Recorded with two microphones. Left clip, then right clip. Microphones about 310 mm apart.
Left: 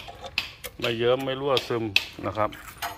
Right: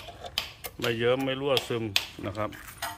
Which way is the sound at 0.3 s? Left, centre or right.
Centre.